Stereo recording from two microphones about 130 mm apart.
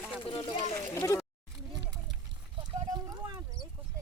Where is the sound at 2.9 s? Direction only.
25° right (ahead or behind).